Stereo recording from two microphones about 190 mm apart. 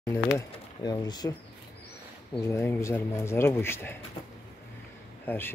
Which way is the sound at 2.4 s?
15° left (ahead or behind).